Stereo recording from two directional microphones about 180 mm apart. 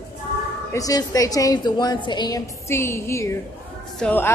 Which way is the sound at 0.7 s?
20° left (ahead or behind).